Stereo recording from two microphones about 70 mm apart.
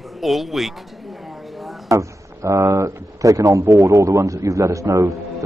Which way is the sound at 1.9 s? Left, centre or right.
Right.